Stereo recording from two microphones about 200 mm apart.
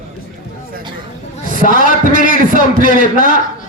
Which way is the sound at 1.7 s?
40° right (ahead or behind).